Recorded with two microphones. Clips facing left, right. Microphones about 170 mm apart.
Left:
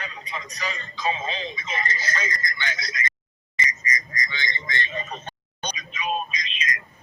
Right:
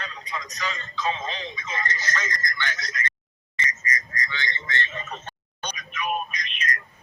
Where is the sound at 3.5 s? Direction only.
15° left (ahead or behind).